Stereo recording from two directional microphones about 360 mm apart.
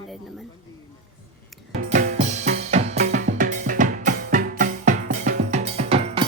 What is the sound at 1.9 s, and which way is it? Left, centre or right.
Drum kit, centre.